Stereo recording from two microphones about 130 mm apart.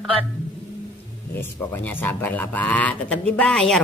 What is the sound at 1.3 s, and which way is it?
A man's voice, 15° left (ahead or behind).